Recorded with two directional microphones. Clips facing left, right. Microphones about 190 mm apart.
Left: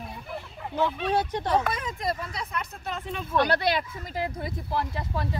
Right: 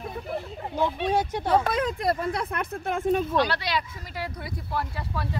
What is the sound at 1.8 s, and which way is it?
Speech, 65° right (ahead or behind).